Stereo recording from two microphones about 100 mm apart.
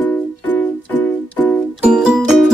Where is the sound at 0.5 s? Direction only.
15° left (ahead or behind).